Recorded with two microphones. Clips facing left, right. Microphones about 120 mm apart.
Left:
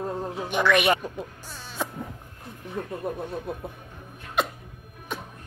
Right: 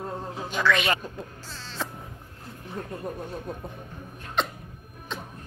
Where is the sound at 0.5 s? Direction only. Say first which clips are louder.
Left 3 dB; 20° left (ahead or behind).